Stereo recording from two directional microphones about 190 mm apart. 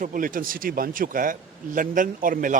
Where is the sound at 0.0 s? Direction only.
45° right (ahead or behind).